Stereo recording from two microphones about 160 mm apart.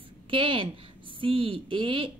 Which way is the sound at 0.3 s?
35° right (ahead or behind).